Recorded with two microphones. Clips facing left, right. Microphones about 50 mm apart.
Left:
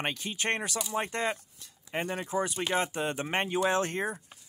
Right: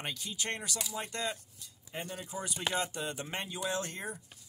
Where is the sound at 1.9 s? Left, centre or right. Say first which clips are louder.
Left 9 dB; left.